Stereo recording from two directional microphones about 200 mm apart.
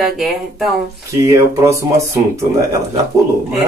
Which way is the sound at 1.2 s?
15° right (ahead or behind).